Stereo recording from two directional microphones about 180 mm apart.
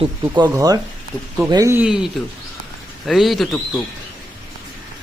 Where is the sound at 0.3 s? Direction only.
20° right (ahead or behind).